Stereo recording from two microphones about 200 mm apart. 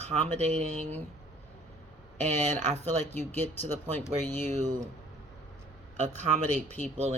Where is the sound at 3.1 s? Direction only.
10° left (ahead or behind).